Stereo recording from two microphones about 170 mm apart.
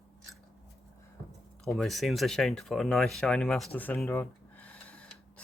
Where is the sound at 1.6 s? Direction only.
Centre (ahead or behind).